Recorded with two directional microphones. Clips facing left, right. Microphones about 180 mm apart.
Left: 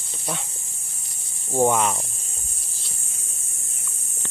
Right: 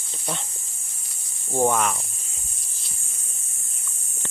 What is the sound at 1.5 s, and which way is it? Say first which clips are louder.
Speech: left 2 dB; 15° left (ahead or behind).